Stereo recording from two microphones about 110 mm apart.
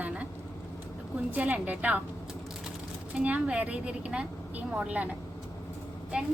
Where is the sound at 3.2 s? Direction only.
10° right (ahead or behind).